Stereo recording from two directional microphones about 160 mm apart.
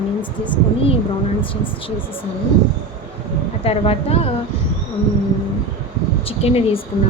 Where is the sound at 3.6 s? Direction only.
35° left (ahead or behind).